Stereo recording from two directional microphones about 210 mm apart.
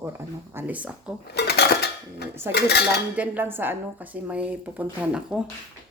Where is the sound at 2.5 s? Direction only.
50° left (ahead or behind).